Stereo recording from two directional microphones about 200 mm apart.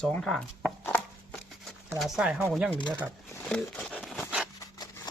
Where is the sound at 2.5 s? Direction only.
5° right (ahead or behind).